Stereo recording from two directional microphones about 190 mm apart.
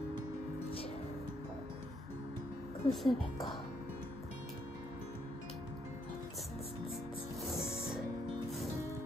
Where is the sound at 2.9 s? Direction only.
Centre (ahead or behind).